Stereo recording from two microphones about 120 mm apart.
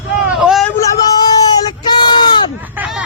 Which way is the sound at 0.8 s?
35° left (ahead or behind).